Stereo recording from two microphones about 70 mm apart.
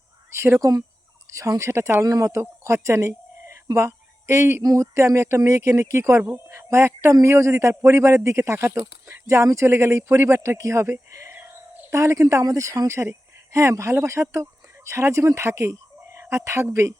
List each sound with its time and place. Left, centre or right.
0.3 s a man's voice: right
2.0 s speech: right
4.6 s a man's voice: right
11.3 s a sound: right
11.9 s a man's voice: right
13.0 s speech: right
15.4 s dog: right
16.3 s a man's voice: right